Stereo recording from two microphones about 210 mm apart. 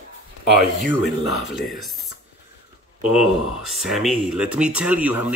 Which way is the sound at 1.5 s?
Centre (ahead or behind).